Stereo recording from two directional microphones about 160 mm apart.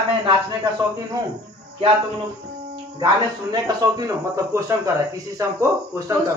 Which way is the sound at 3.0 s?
25° right (ahead or behind).